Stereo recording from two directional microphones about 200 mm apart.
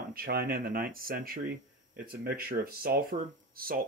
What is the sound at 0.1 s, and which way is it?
Speech, 45° right (ahead or behind).